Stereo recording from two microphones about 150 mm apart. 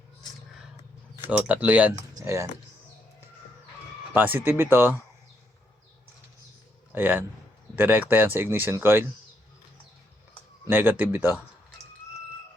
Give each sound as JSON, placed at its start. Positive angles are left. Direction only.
{"t": 1.3, "sound": "speech", "side_deg": -10}
{"t": 4.1, "sound": "speech", "side_deg": -15}
{"t": 6.9, "sound": "speech", "side_deg": -15}
{"t": 10.7, "sound": "speech", "side_deg": -10}